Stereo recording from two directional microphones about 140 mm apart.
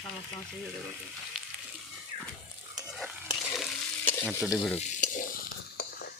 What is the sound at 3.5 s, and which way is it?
Stir, centre (ahead or behind).